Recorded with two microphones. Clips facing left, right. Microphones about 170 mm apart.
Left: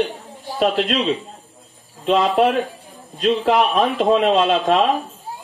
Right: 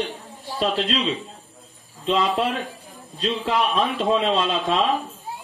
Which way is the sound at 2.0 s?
65° left (ahead or behind).